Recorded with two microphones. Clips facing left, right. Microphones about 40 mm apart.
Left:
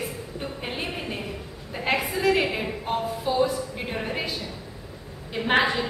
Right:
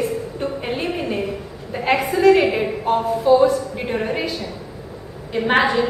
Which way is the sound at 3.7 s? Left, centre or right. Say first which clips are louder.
Right 7 dB; centre.